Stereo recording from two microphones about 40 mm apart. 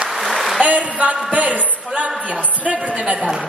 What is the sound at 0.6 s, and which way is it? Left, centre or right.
A woman's voice, right.